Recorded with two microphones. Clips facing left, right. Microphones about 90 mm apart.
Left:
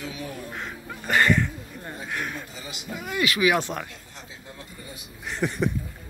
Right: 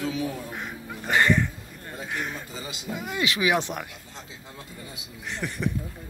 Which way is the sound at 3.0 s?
20° right (ahead or behind).